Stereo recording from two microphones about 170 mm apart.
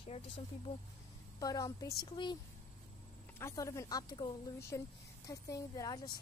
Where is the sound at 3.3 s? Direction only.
15° left (ahead or behind).